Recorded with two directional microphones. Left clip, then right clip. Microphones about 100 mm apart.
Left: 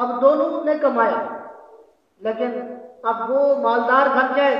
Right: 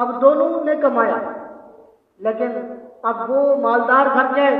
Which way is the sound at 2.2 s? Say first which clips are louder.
Right 3 dB; 15° left (ahead or behind).